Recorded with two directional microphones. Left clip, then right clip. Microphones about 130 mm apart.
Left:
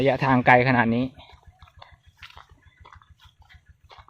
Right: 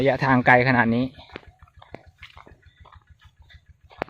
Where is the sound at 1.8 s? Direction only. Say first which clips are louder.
Right 3 dB; 25° left (ahead or behind).